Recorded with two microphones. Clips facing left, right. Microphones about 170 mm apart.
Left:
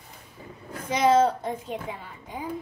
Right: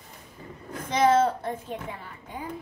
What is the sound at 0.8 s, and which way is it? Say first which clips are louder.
A child's voice: left 1 dB; 10° left (ahead or behind).